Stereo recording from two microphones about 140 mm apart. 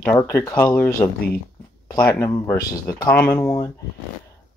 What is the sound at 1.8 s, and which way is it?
Speech, 25° left (ahead or behind).